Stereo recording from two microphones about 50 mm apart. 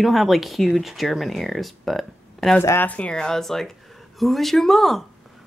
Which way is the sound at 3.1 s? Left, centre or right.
Centre.